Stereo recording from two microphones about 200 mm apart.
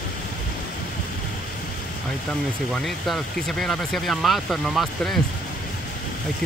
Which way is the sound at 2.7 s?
Centre (ahead or behind).